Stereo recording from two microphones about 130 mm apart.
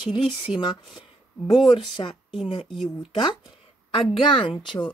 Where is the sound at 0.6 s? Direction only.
35° left (ahead or behind).